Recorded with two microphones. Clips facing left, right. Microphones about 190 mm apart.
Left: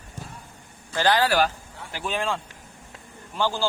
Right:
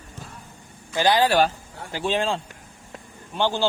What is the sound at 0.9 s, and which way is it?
A man's voice, 15° right (ahead or behind).